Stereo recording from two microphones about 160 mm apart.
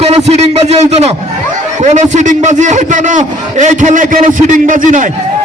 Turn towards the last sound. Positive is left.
turn(degrees=-55)  # may be behind; listen again after turning